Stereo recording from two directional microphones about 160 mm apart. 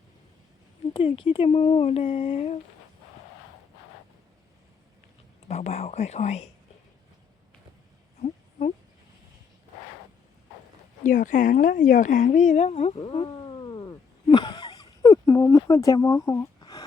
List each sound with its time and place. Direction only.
0.9 s speech: 35° left (ahead or behind)
5.5 s a woman's voice: 40° left (ahead or behind)
8.2 s a sound: 45° left (ahead or behind)
11.0 s a woman's voice: 55° left (ahead or behind); by 13.0 s 40° left (ahead or behind)
13.0 s cat: 35° left (ahead or behind)